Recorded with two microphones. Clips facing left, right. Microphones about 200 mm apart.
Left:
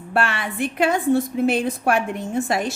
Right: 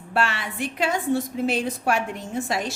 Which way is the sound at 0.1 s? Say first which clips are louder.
Left 2 dB; 55° left (ahead or behind).